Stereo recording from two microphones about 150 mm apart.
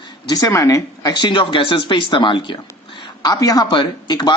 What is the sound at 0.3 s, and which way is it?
Speech, 25° left (ahead or behind).